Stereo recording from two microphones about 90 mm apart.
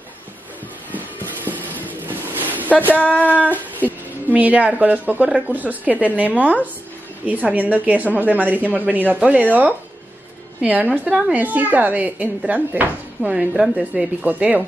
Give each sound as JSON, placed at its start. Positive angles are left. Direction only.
{"t": 1.5, "sound": "a sound", "side_deg": -20}
{"t": 2.9, "sound": "female singing", "side_deg": 20}
{"t": 4.3, "sound": "a woman's voice", "side_deg": -15}